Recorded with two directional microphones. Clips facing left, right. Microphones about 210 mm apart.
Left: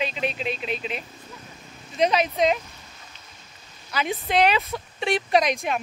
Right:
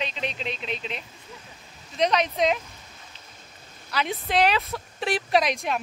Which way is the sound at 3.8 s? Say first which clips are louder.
Left 1 dB; centre (ahead or behind).